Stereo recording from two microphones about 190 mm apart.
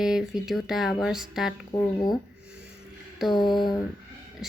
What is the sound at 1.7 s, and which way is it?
Speech, 20° left (ahead or behind).